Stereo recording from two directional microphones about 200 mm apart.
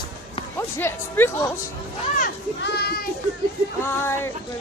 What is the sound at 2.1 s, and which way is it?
Speech, 50° left (ahead or behind).